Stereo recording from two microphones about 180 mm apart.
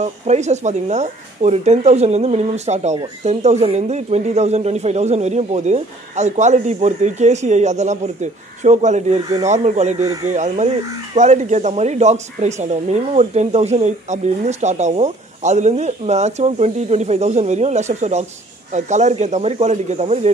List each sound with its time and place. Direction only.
0.0 s speech: 40° right (ahead or behind)